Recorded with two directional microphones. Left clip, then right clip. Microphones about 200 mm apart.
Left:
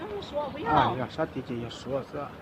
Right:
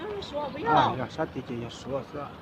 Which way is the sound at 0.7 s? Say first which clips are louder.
Even; 5° left (ahead or behind).